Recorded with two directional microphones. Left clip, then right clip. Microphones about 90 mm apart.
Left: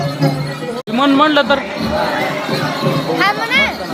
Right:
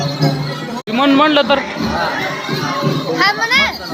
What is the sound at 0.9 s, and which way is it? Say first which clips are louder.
Speech: even; 5° left (ahead or behind).